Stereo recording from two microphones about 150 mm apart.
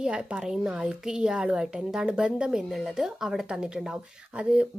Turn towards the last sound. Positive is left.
turn(degrees=-5)  # may be behind; listen again after turning